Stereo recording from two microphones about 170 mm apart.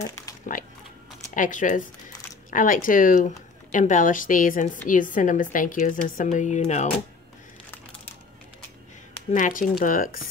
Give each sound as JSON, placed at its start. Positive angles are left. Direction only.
{"t": 0.0, "sound": "dog", "side_deg": 20}
{"t": 1.3, "sound": "speech", "side_deg": 50}
{"t": 9.3, "sound": "speech", "side_deg": 50}